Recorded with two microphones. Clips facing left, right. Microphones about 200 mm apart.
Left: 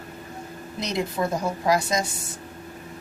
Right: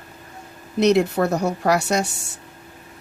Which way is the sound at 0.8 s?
70° right (ahead or behind).